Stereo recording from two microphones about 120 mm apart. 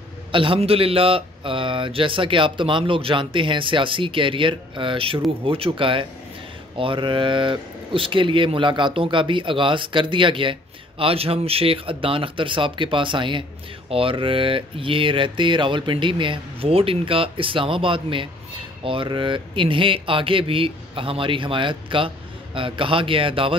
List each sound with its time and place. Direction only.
0.3 s speech: 45° right (ahead or behind)